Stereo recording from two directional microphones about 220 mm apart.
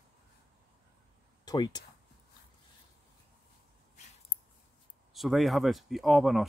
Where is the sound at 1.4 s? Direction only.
20° left (ahead or behind).